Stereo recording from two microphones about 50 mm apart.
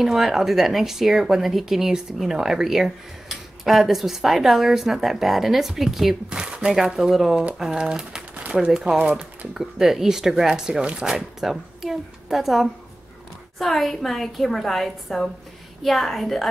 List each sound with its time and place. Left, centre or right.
0.0 s speech: centre
6.3 s a sound: centre
6.7 s speech: centre
8.9 s speech: right
9.5 s speech: centre
10.8 s speech: right
11.1 s speech: centre